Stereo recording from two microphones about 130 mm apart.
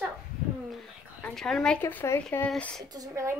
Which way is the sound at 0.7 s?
Centre (ahead or behind).